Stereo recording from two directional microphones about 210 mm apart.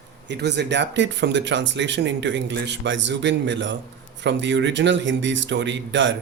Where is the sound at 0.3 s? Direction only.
55° right (ahead or behind).